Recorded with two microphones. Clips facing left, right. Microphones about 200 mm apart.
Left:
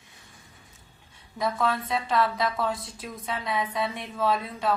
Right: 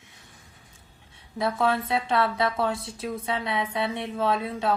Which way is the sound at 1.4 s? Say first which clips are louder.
Right 2 dB; 25° right (ahead or behind).